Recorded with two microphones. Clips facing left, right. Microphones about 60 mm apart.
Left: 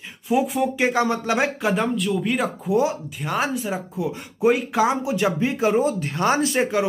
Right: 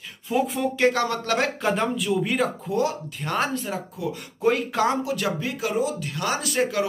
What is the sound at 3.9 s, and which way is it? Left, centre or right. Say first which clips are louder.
Speech: left 3 dB; left.